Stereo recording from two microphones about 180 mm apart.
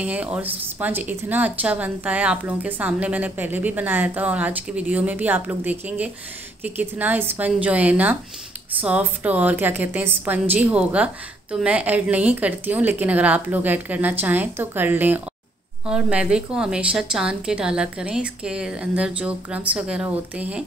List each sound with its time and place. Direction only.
0.0 s a woman's voice: 5° right (ahead or behind)